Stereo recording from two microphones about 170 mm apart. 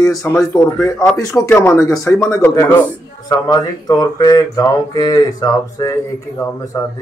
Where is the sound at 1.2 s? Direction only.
20° left (ahead or behind).